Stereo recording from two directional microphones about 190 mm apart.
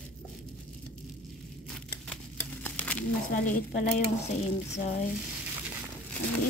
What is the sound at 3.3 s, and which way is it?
A woman's voice, 45° left (ahead or behind).